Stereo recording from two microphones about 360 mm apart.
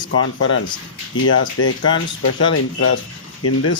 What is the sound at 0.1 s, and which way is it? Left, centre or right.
Speech, left.